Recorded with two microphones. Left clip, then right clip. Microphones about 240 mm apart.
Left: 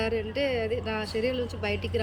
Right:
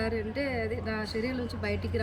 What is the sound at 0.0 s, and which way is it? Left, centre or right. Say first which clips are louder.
Speech: left 4 dB; centre.